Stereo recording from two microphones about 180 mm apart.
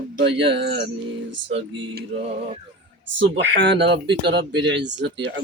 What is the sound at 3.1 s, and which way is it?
Speech, 90° right.